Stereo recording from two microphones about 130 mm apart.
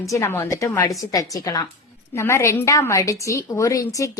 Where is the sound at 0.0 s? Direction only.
20° left (ahead or behind).